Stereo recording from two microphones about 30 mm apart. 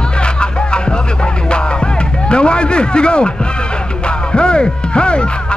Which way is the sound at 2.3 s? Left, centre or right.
Left.